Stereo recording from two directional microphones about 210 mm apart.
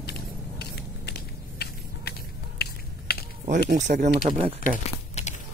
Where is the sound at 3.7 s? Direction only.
35° right (ahead or behind).